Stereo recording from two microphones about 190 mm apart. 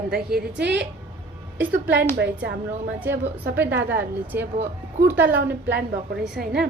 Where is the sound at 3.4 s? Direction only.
60° right (ahead or behind).